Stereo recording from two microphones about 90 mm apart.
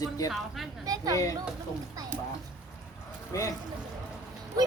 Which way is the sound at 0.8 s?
45° right (ahead or behind).